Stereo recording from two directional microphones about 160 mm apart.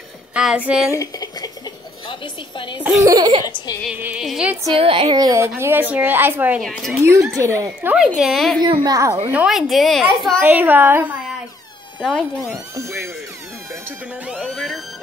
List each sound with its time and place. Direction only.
0.3 s a woman's voice: 5° right (ahead or behind)
0.9 s a sound: 25° left (ahead or behind)
2.0 s a woman's voice: 30° left (ahead or behind)
2.8 s speech: 15° right (ahead or behind)
3.4 s music: 25° left (ahead or behind)
3.9 s a woman's voice: 10° right (ahead or behind)
4.7 s a woman's voice: 35° right (ahead or behind); by 7.9 s 15° right (ahead or behind)
8.2 s a woman's voice: centre (ahead or behind)
8.5 s speech: 25° right (ahead or behind)
9.3 s a woman's voice: 5° right (ahead or behind)
10.4 s a woman's voice: 10° right (ahead or behind)
12.0 s a woman's voice: 5° left (ahead or behind)
12.5 s a woman's voice: 20° right (ahead or behind); by 14.8 s centre (ahead or behind)